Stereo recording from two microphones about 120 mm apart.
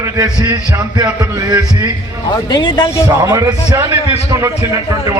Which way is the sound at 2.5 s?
40° left (ahead or behind).